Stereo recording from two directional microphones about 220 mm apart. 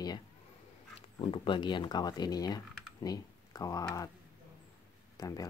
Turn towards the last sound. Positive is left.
turn(degrees=15)  # may be behind; listen again after turning